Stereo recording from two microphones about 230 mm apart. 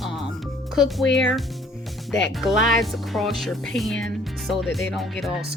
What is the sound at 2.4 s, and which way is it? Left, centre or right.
Speech, centre.